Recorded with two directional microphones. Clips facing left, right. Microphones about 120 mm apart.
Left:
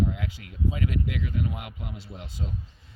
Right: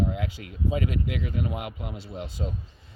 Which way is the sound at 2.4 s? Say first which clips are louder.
Right 2 dB; 30° right (ahead or behind).